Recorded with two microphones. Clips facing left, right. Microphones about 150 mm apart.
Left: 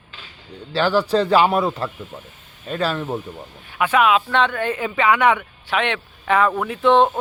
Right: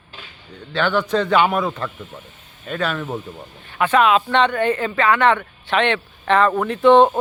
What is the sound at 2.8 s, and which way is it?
Speech, 30° left (ahead or behind).